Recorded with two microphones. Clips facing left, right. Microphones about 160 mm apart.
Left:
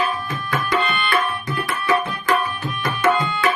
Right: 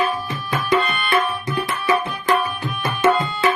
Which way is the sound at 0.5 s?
20° right (ahead or behind).